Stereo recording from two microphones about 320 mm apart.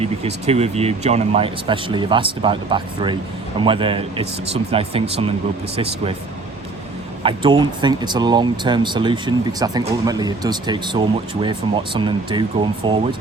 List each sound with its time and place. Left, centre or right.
0.0 s speech: centre
7.2 s speech: centre